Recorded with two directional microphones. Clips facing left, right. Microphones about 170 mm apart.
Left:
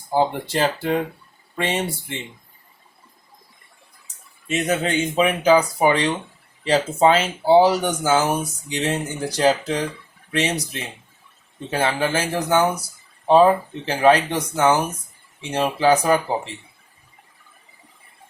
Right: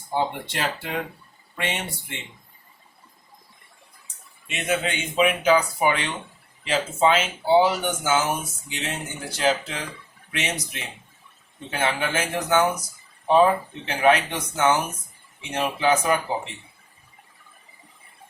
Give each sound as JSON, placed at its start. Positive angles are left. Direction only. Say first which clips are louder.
{"t": 0.1, "sound": "speech", "louder": "left 6 dB", "side_deg": 35}
{"t": 4.0, "sound": "speech", "louder": "left 12 dB", "side_deg": 40}